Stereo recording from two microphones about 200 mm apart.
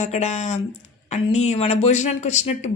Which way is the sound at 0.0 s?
35° left (ahead or behind).